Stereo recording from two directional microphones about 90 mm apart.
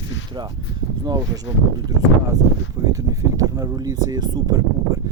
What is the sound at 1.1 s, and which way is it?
Speech, 45° right (ahead or behind).